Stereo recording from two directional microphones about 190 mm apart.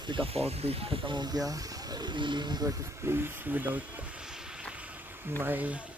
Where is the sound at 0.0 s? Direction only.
25° right (ahead or behind).